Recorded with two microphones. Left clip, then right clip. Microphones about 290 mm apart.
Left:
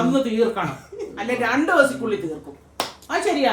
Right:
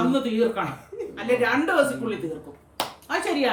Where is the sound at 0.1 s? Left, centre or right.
Centre.